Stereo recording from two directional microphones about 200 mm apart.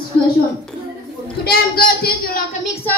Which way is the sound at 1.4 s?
50° left (ahead or behind).